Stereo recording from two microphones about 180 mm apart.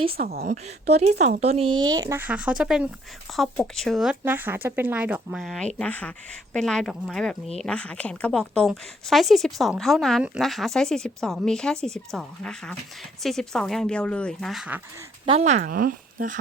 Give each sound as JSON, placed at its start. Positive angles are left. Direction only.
{"t": 0.2, "sound": "a woman's voice", "side_deg": -60}
{"t": 1.4, "sound": "a woman's voice", "side_deg": -35}
{"t": 15.3, "sound": "speech", "side_deg": -40}
{"t": 15.7, "sound": "speech", "side_deg": -50}